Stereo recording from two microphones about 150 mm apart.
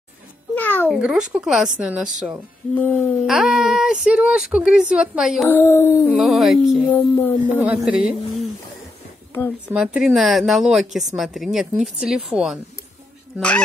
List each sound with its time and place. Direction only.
0.6 s a sound: 15° left (ahead or behind)
0.8 s a woman's voice: 5° right (ahead or behind)
2.7 s speech: 10° left (ahead or behind)
3.3 s speech: centre (ahead or behind)
5.5 s speech: 20° left (ahead or behind)
6.1 s speech: centre (ahead or behind)
6.9 s speech: 10° left (ahead or behind)
7.6 s a woman's voice: 5° right (ahead or behind)
9.7 s speech: 5° right (ahead or behind)